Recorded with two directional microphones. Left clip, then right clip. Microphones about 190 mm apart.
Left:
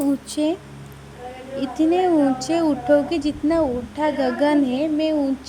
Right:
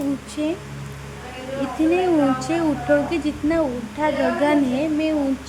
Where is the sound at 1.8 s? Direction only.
25° left (ahead or behind).